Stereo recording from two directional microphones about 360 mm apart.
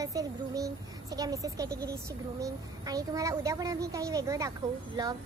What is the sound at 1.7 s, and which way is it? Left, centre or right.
Speech, right.